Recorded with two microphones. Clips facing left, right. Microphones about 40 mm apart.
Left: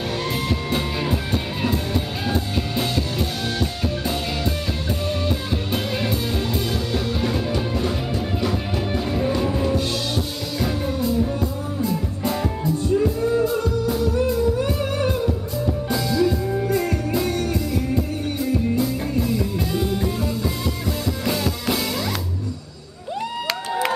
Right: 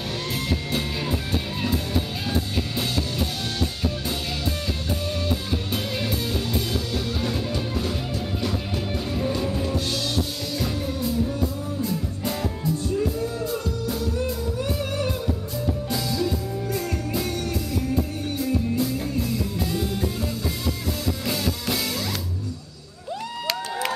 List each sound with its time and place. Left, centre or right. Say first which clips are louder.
0.5 s music: left 3 dB; centre
2.2 s music: left 3 dB; centre
5.2 s music: left 2 dB; centre
13.5 s music: left 6 dB; centre
14.6 s music: left 4 dB; centre
21.3 s drum kit: left 5 dB; centre